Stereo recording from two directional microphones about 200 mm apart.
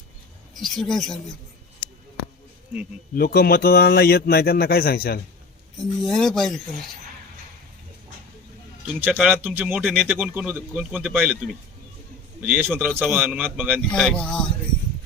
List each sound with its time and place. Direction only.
0.5 s speech: centre (ahead or behind)
3.2 s a man's voice: 50° left (ahead or behind)
6.1 s speech: centre (ahead or behind)
9.0 s speech: 5° right (ahead or behind)
12.4 s speech: 10° right (ahead or behind)
13.9 s speech: 5° left (ahead or behind)